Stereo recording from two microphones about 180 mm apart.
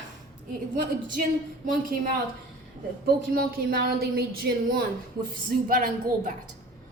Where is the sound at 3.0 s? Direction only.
55° right (ahead or behind).